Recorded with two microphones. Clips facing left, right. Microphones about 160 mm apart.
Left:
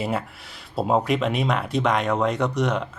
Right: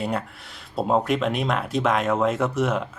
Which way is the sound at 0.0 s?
5° left (ahead or behind).